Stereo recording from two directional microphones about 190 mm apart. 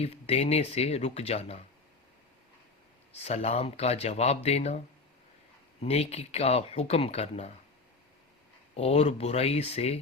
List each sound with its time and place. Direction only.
0.0 s speech: 30° left (ahead or behind)
3.1 s speech: 35° left (ahead or behind)
5.8 s speech: 35° left (ahead or behind)
8.7 s speech: 35° left (ahead or behind)